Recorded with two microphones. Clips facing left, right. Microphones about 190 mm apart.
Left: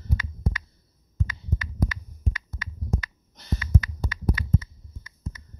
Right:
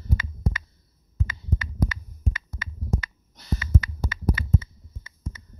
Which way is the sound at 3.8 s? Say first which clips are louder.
Right 1 dB; 25° right (ahead or behind).